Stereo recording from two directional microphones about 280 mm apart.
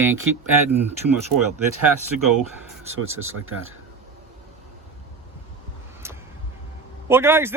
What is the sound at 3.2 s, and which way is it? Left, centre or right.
Speech, right.